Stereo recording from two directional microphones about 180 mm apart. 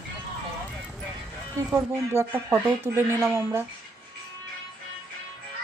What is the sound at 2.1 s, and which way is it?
Speech, 15° right (ahead or behind).